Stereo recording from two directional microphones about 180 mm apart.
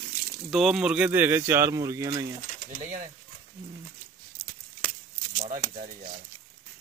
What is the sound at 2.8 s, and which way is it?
Speech, 45° right (ahead or behind).